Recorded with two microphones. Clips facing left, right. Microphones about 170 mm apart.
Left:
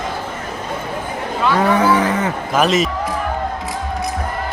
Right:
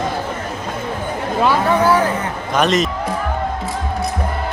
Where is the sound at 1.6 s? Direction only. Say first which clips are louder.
Left 1 dB; 90° left.